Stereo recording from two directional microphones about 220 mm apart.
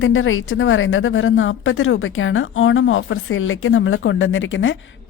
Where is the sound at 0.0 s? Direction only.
60° left (ahead or behind).